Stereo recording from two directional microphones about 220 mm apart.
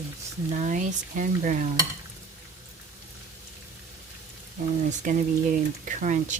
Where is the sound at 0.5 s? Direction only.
35° right (ahead or behind).